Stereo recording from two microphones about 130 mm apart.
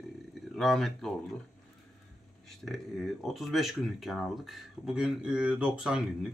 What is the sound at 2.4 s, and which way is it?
Speech, centre (ahead or behind).